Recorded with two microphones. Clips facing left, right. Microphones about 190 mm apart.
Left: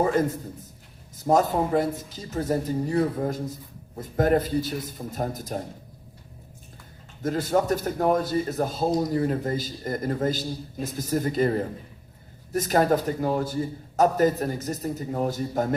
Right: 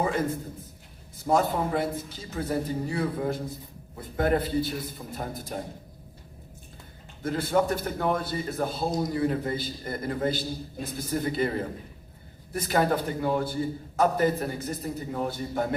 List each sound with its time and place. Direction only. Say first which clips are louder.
0.0 s a man's voice: left 4 dB; 40° left (ahead or behind)
7.2 s a man's voice: left 2 dB; 40° left (ahead or behind)